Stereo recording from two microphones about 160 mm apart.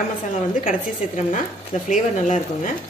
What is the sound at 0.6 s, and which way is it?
Speech, 55° left (ahead or behind).